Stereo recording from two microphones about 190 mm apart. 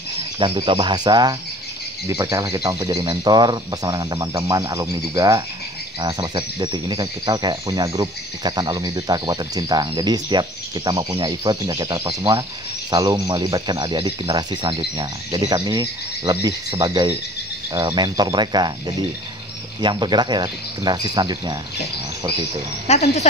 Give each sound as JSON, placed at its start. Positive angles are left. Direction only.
{"t": 0.4, "sound": "speech", "side_deg": -25}
{"t": 22.8, "sound": "speech", "side_deg": 35}